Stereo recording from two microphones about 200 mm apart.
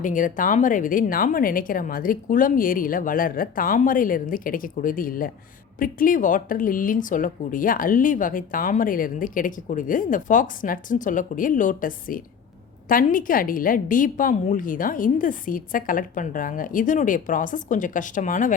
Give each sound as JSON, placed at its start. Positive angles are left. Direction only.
{"t": 0.0, "sound": "speech", "side_deg": 40}